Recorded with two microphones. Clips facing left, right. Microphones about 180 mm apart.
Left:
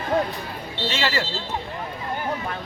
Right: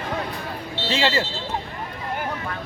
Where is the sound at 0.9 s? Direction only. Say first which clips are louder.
Right 4 dB; 25° right (ahead or behind).